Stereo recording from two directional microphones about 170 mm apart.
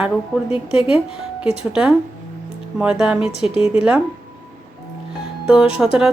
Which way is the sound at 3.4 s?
35° left (ahead or behind).